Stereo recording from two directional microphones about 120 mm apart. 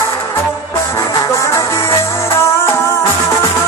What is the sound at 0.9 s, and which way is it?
Music, 25° left (ahead or behind).